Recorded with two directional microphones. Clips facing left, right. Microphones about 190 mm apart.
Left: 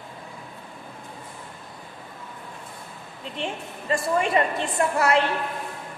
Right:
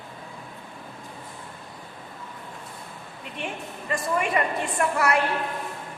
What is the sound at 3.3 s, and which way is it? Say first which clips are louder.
A woman's voice: left 2 dB; 30° left (ahead or behind).